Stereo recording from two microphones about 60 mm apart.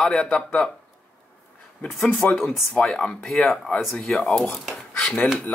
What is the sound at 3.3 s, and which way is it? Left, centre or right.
Speech, centre.